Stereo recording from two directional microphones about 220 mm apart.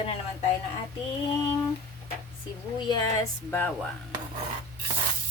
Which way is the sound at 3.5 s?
5° left (ahead or behind).